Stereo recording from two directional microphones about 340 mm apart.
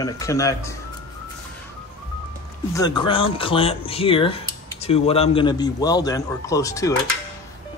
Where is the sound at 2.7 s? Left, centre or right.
Centre.